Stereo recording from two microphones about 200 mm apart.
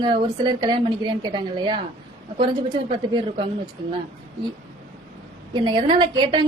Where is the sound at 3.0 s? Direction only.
25° right (ahead or behind).